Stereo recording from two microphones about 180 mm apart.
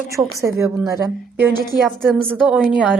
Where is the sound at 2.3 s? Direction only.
10° right (ahead or behind).